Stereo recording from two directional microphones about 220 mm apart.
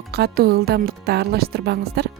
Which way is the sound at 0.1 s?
45° right (ahead or behind).